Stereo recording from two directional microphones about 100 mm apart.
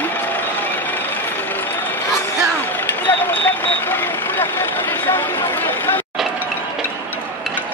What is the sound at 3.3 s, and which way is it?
Vehicle, 20° left (ahead or behind).